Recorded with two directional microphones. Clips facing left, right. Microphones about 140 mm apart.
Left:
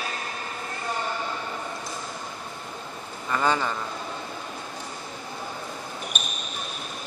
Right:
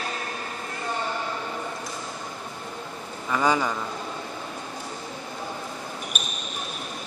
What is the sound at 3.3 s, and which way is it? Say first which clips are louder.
Speech: right 1 dB; 10° right (ahead or behind).